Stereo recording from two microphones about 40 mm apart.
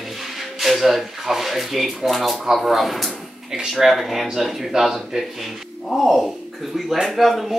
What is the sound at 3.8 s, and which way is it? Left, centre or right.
Speech, centre.